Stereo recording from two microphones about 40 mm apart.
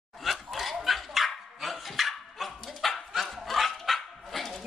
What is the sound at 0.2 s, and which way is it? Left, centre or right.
Dog, centre.